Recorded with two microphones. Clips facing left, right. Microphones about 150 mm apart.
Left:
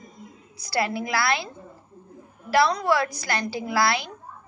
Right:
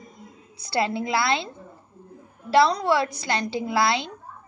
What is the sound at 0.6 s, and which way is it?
Speech, 25° right (ahead or behind).